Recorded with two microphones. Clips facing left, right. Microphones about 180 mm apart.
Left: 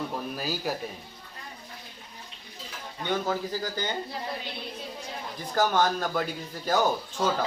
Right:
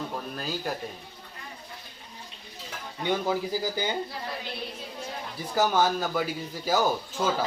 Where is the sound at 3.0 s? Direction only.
10° right (ahead or behind).